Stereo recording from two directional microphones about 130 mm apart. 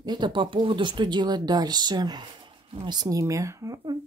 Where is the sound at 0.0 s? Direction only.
35° right (ahead or behind).